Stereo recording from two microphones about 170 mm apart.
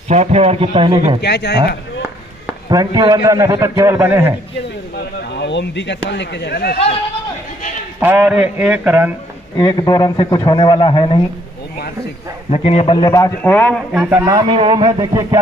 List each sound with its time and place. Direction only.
0.1 s a man's voice: 40° right (ahead or behind)
1.2 s speech: 75° left (ahead or behind)
2.7 s a man's voice: 20° right (ahead or behind)
4.9 s speech: 85° left; by 6.8 s 70° left (ahead or behind)
8.0 s a man's voice: 10° right (ahead or behind)
9.6 s a man's voice: 25° left (ahead or behind)
12.4 s a man's voice: 40° left (ahead or behind); by 13.3 s 20° left (ahead or behind)
13.4 s a man's voice: 10° left (ahead or behind)
13.9 s a man's voice: 10° right (ahead or behind)
14.2 s a man's voice: 25° right (ahead or behind)